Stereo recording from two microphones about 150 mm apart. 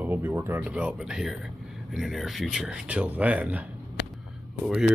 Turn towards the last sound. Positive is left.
turn(degrees=-5)  # may be behind; listen again after turning